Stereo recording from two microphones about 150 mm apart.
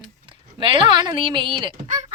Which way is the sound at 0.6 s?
35° right (ahead or behind).